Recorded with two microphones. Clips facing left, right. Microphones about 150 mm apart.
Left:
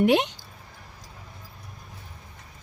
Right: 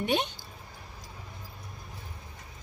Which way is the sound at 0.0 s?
90° left.